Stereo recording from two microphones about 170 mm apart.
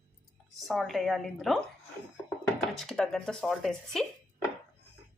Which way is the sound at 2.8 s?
Centre (ahead or behind).